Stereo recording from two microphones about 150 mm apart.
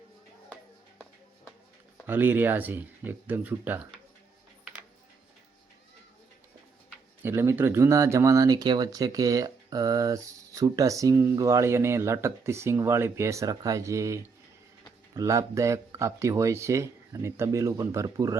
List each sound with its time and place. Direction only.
2.0 s speech: 15° right (ahead or behind)
7.2 s speech: 15° right (ahead or behind)